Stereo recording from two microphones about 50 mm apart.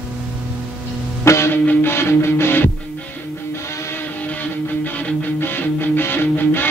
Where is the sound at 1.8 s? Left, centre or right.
Left.